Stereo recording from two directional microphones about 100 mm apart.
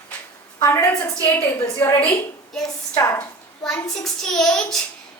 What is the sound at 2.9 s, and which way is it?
Speech, 30° left (ahead or behind).